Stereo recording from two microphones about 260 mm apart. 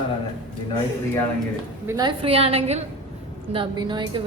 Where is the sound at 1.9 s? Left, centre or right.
Centre.